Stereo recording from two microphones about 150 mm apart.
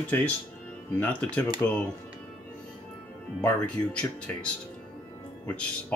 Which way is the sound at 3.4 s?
5° left (ahead or behind).